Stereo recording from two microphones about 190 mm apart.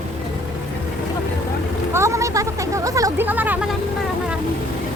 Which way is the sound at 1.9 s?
15° right (ahead or behind).